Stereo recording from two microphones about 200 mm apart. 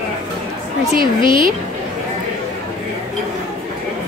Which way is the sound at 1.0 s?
25° left (ahead or behind).